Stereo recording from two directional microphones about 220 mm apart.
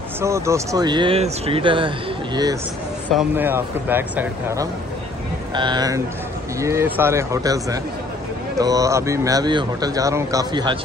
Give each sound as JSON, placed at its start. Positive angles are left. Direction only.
{"t": 0.2, "sound": "speech", "side_deg": -15}
{"t": 3.2, "sound": "speech", "side_deg": -10}